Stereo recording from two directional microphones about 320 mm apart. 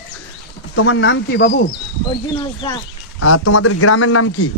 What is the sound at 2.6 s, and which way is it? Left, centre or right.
Speech, centre.